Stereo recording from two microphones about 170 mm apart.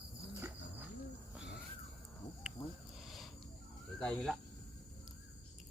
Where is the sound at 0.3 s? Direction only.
15° right (ahead or behind).